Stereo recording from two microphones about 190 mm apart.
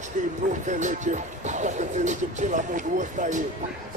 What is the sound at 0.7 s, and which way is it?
Speech, 40° right (ahead or behind).